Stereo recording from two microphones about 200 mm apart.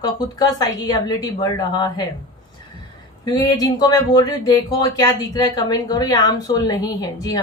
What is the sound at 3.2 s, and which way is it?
Speech, 20° left (ahead or behind).